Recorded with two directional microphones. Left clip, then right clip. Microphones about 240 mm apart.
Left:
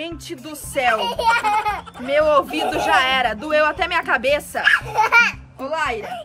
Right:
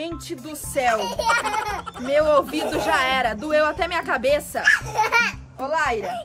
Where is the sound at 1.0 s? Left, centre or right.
Centre.